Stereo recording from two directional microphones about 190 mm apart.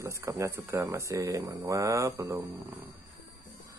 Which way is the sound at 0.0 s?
15° right (ahead or behind).